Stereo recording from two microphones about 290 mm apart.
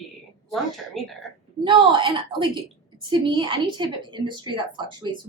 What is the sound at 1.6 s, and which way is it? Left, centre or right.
Speech, centre.